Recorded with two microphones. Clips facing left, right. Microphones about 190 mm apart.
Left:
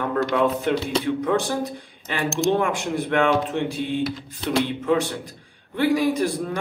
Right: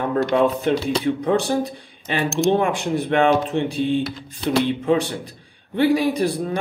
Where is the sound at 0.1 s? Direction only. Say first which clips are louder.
Right 3 dB; 25° right (ahead or behind).